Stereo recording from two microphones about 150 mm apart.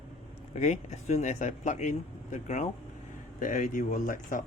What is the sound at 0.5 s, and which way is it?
Speech, 50° left (ahead or behind).